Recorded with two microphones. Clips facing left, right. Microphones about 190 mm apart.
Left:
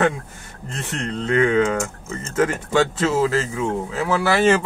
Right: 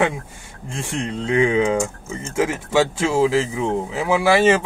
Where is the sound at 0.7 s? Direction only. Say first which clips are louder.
Right 2 dB; 10° right (ahead or behind).